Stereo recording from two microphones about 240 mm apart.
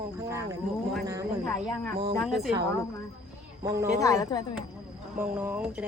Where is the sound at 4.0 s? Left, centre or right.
Centre.